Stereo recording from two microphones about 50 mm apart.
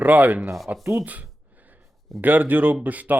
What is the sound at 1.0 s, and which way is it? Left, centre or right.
Speech, right.